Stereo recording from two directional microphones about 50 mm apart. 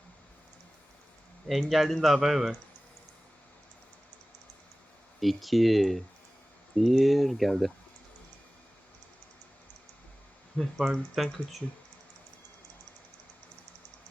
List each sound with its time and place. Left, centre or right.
1.5 s a man's voice: centre
5.2 s a man's voice: centre
10.5 s speech: centre
11.1 s a man's voice: centre